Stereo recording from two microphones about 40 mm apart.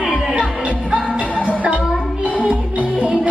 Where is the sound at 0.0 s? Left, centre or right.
Right.